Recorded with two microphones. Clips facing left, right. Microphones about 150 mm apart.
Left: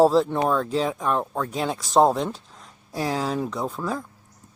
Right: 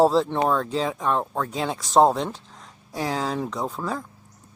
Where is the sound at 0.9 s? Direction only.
25° right (ahead or behind).